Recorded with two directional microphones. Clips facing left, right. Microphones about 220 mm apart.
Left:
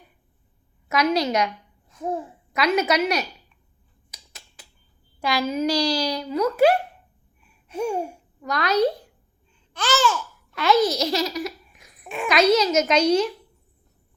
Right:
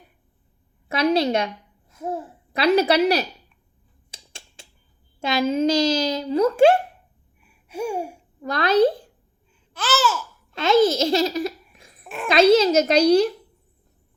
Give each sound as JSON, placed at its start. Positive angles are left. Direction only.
{"t": 0.9, "sound": "a woman's voice", "side_deg": -30}
{"t": 1.9, "sound": "babbling", "side_deg": -5}
{"t": 2.5, "sound": "a child's voice", "side_deg": -30}
{"t": 4.1, "sound": "a sound", "side_deg": -30}
{"t": 5.2, "sound": "a child's voice", "side_deg": -25}
{"t": 7.4, "sound": "a sound", "side_deg": -10}
{"t": 8.4, "sound": "a child's voice", "side_deg": -30}
{"t": 9.7, "sound": "babbling", "side_deg": -5}
{"t": 10.5, "sound": "a child's voice", "side_deg": -25}
{"t": 12.0, "sound": "a child's voice", "side_deg": 0}
{"t": 12.3, "sound": "a child's voice", "side_deg": -30}